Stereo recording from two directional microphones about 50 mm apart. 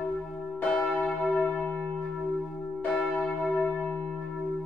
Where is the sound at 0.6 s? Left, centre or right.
Left.